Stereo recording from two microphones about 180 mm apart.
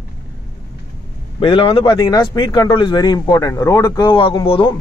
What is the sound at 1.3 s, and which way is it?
A man's voice, 30° left (ahead or behind).